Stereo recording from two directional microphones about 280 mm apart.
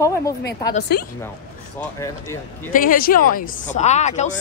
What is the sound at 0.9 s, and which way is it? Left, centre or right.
Speech, left.